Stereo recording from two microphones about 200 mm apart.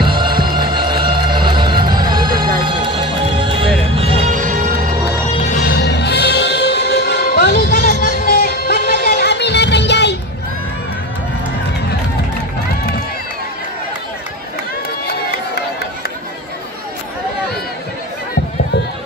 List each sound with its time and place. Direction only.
0.0 s music: 25° right (ahead or behind); by 4.7 s 40° right (ahead or behind)
5.5 s music: 50° left (ahead or behind)